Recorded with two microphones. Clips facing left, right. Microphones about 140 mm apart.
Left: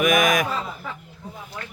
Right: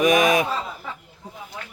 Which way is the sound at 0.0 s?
30° right (ahead or behind).